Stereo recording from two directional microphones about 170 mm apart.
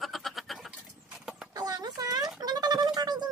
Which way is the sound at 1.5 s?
25° right (ahead or behind).